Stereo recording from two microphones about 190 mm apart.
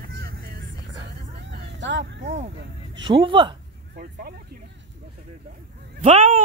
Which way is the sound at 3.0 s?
25° right (ahead or behind).